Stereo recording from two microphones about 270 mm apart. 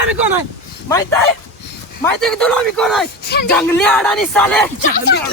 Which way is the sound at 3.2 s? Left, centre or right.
Left.